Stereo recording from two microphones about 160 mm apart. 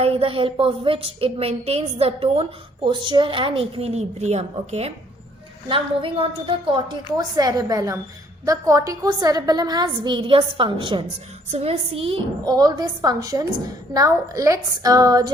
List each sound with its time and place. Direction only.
0.0 s a woman's voice: 35° right (ahead or behind)
12.5 s a woman's voice: 25° right (ahead or behind)